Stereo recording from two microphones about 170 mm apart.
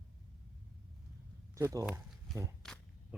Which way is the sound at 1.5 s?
20° right (ahead or behind).